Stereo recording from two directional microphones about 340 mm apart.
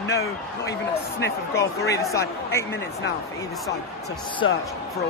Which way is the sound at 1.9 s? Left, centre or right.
Centre.